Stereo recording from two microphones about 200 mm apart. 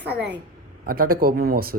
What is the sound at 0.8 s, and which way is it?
Speech, 45° right (ahead or behind).